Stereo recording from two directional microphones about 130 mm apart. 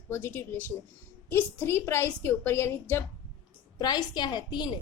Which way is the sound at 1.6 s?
20° left (ahead or behind).